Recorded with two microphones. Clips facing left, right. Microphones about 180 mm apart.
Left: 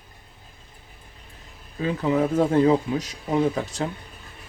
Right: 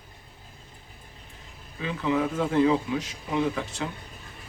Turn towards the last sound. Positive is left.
turn(degrees=40)  # may be behind; listen again after turning